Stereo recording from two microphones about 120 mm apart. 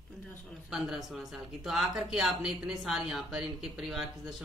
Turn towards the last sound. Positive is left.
turn(degrees=0)  # may be behind; listen again after turning